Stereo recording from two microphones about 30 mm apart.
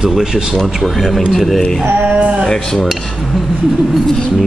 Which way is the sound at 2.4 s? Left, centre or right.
Centre.